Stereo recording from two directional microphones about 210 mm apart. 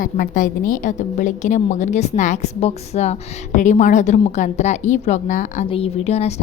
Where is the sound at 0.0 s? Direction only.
40° left (ahead or behind).